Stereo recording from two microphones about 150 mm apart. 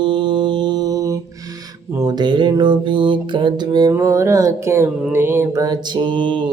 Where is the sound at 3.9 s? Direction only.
20° right (ahead or behind).